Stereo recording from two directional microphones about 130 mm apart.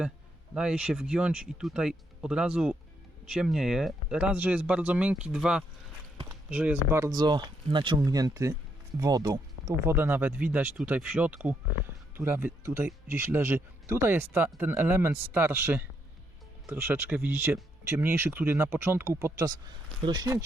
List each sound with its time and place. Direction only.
0.5 s a man's voice: 5° right (ahead or behind)
7.0 s a man's voice: 30° right (ahead or behind)